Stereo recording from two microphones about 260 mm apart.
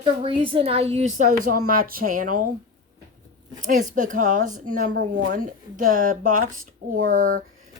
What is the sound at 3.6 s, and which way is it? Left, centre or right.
A woman's voice, right.